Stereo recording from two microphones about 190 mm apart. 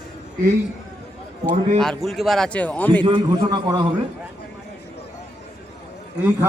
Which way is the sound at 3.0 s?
20° right (ahead or behind).